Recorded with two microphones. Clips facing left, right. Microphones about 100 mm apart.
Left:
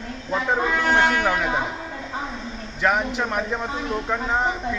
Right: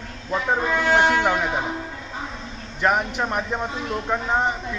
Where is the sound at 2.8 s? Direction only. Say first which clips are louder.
Even; 5° right (ahead or behind).